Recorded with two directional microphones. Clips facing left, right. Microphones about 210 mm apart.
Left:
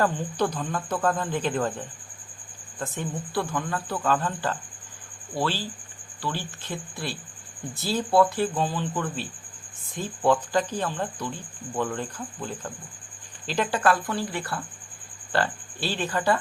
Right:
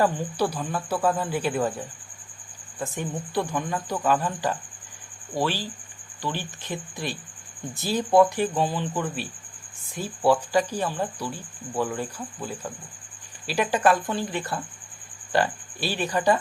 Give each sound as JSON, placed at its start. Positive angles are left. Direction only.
{"t": 0.0, "sound": "speech", "side_deg": -10}